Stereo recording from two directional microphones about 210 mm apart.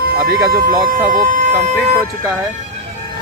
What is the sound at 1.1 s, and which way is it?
Speech, 40° right (ahead or behind).